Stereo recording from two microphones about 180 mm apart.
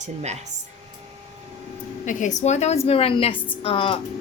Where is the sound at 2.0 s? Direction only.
45° left (ahead or behind).